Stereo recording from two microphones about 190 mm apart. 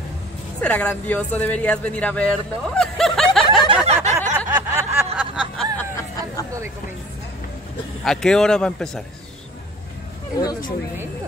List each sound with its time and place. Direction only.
0.6 s speech: 5° left (ahead or behind)
3.6 s a sound: 30° right (ahead or behind)
4.6 s snicker: 15° right (ahead or behind)
5.8 s a sound: 15° left (ahead or behind)
8.0 s speech: 5° left (ahead or behind)
10.4 s speech: 20° left (ahead or behind)